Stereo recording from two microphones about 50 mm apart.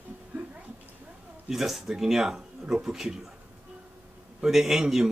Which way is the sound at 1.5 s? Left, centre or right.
Centre.